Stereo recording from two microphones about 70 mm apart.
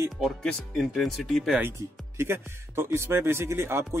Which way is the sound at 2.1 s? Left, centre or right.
Right.